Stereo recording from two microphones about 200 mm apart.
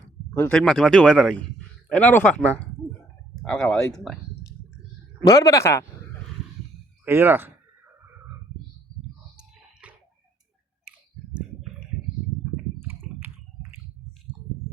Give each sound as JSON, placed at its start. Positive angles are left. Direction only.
{"t": 0.3, "sound": "a man's voice", "side_deg": 5}
{"t": 5.2, "sound": "a man's voice", "side_deg": 20}
{"t": 7.0, "sound": "speech", "side_deg": -10}
{"t": 9.8, "sound": "a sound", "side_deg": -5}
{"t": 10.9, "sound": "clicking", "side_deg": -5}
{"t": 13.2, "sound": "a sound", "side_deg": -10}